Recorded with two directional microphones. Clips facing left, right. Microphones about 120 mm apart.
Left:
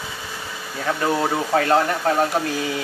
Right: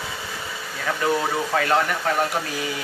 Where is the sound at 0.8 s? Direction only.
25° left (ahead or behind).